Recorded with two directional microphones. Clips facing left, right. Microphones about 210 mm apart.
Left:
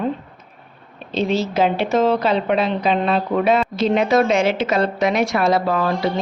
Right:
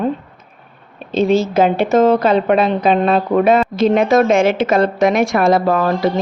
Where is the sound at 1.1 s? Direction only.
50° right (ahead or behind).